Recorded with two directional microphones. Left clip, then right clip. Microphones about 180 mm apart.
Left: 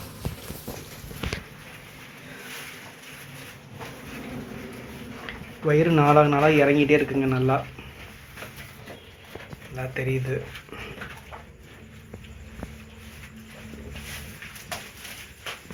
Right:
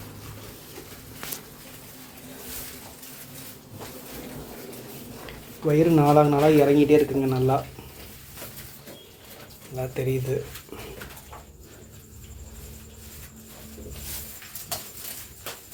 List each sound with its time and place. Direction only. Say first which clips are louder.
5.2 s a man's voice: left 1 dB; 15° right (ahead or behind)
9.9 s speech: even; 15° right (ahead or behind)